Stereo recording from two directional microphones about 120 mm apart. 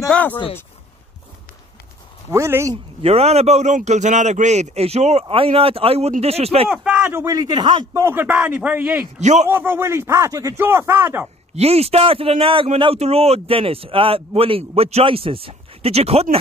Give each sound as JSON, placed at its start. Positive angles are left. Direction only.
{"t": 0.1, "sound": "a sound", "side_deg": 10}
{"t": 2.3, "sound": "speech", "side_deg": -25}
{"t": 3.0, "sound": "a man's voice", "side_deg": -60}
{"t": 5.3, "sound": "speech", "side_deg": -50}
{"t": 6.7, "sound": "speech", "side_deg": -10}
{"t": 7.9, "sound": "a man's voice", "side_deg": -20}
{"t": 9.2, "sound": "a man's voice", "side_deg": -75}
{"t": 9.5, "sound": "speech", "side_deg": -15}
{"t": 11.5, "sound": "speech", "side_deg": -60}